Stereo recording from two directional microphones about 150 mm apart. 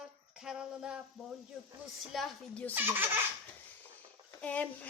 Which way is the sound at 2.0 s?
Centre (ahead or behind).